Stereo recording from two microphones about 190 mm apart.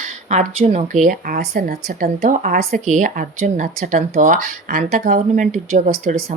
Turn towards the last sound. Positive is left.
turn(degrees=-45)  # may be behind; listen again after turning